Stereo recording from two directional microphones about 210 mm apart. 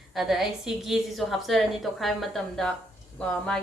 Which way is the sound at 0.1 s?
Centre (ahead or behind).